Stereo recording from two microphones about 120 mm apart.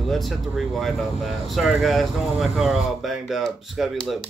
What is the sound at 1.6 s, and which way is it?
Speech, centre (ahead or behind).